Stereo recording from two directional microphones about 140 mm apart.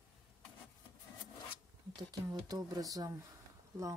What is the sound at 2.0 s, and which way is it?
Speech, 30° right (ahead or behind).